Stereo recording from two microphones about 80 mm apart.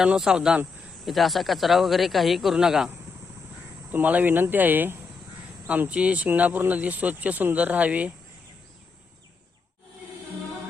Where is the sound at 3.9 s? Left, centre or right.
Right.